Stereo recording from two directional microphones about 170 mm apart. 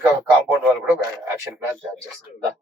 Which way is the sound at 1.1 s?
15° right (ahead or behind).